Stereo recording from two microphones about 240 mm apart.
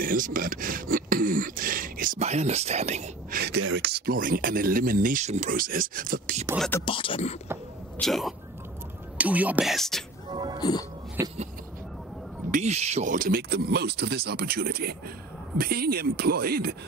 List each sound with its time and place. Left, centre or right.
0.0 s speech: right
6.9 s speech: left
8.0 s speech: centre
10.3 s speech: centre
10.6 s speech: centre
11.2 s speech: centre
12.4 s speech: right